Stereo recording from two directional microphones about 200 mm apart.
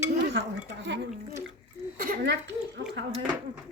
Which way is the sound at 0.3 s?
60° right (ahead or behind).